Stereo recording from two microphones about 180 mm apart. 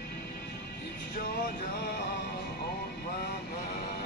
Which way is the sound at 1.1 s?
60° left (ahead or behind).